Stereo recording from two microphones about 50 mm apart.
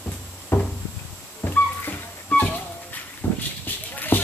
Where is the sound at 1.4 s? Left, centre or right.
Left.